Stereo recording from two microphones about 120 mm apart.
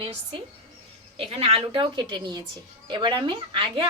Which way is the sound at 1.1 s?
55° right (ahead or behind).